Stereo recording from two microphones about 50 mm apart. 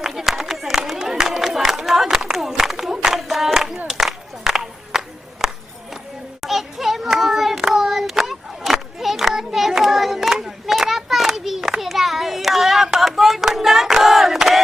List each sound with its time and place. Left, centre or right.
0.0 s run: centre
3.9 s a sound: centre
6.4 s hands: centre